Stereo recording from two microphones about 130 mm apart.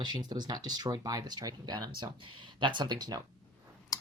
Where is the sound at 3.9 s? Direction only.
30° left (ahead or behind).